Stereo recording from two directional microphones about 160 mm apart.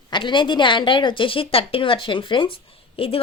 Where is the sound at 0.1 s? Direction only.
30° left (ahead or behind).